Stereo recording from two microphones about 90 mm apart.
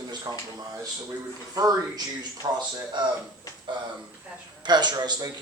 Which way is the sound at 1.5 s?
45° right (ahead or behind).